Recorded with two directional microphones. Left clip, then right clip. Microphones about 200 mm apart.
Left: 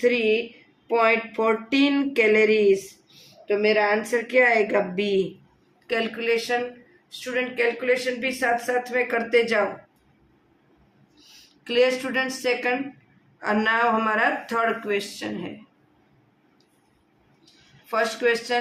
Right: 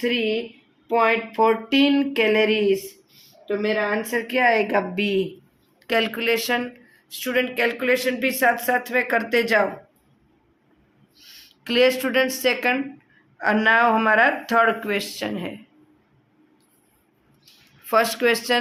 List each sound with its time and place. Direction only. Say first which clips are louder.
0.0 s speech: left 2 dB; 25° right (ahead or behind)
5.9 s speech: right 3 dB; 50° right (ahead or behind)
11.6 s speech: right 2 dB; 45° right (ahead or behind)
17.8 s speech: right 3 dB; 45° right (ahead or behind)